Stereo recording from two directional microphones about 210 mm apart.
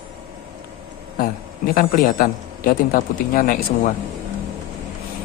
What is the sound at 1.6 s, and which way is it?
Speech, 45° left (ahead or behind).